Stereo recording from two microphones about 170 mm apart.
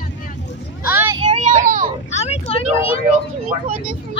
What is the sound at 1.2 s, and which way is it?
Vehicle, 40° right (ahead or behind).